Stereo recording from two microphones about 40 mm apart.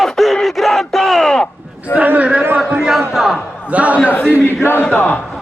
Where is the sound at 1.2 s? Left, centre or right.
Centre.